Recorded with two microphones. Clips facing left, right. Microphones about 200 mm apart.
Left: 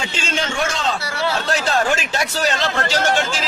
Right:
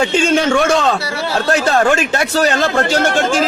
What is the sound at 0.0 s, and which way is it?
A man's voice, 55° right (ahead or behind).